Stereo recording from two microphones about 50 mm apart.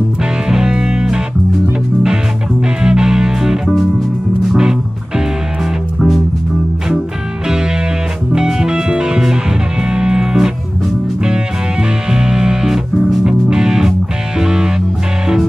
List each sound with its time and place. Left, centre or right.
0.2 s music: centre
2.8 s music: centre
5.9 s music: centre
7.4 s music: centre
12.1 s music: centre